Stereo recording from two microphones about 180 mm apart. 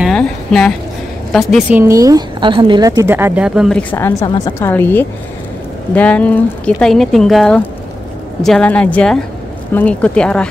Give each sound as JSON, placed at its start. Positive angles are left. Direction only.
{"t": 0.0, "sound": "a sound", "side_deg": 5}
{"t": 1.3, "sound": "speech", "side_deg": 0}
{"t": 1.8, "sound": "a woman's voice", "side_deg": -20}
{"t": 3.9, "sound": "speech", "side_deg": 15}